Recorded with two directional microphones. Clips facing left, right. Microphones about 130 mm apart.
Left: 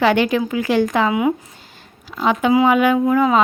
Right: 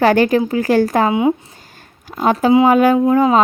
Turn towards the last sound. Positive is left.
turn(degrees=-35)  # may be behind; listen again after turning